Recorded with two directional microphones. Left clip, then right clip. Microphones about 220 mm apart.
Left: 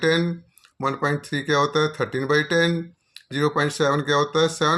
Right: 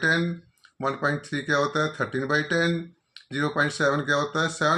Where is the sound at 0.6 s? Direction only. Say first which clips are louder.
Left 2 dB; 50° left (ahead or behind).